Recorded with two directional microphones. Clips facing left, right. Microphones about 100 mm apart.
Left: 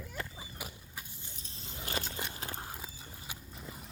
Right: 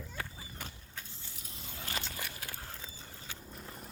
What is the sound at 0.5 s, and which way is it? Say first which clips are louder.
Vehicle: left 1 dB; 10° left (ahead or behind).